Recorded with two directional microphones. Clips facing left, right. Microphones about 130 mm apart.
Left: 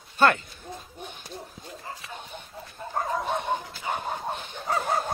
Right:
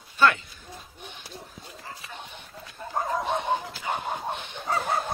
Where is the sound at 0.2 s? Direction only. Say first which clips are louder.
Left 1 dB; 50° left (ahead or behind).